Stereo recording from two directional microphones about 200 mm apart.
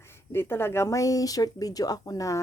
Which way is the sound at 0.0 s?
10° left (ahead or behind).